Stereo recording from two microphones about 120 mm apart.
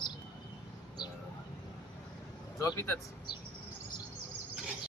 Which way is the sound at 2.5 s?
20° left (ahead or behind).